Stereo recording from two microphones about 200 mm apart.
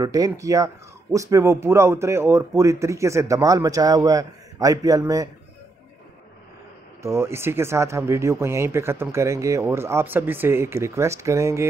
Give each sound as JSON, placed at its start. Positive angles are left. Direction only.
{"t": 0.0, "sound": "speech", "side_deg": -15}
{"t": 7.0, "sound": "speech", "side_deg": -15}